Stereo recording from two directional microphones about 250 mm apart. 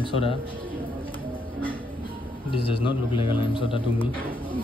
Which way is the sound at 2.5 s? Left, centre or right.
Left.